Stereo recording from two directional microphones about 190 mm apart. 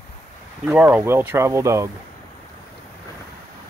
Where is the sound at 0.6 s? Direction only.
5° right (ahead or behind).